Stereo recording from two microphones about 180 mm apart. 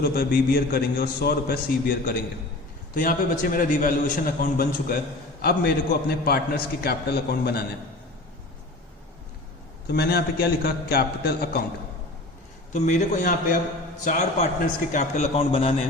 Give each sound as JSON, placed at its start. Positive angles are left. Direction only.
{"t": 0.0, "sound": "a man's voice", "side_deg": 60}
{"t": 9.9, "sound": "a man's voice", "side_deg": 60}
{"t": 12.7, "sound": "a man's voice", "side_deg": 40}